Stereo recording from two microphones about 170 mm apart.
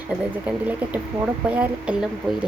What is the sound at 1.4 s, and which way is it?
Speech, 5° right (ahead or behind).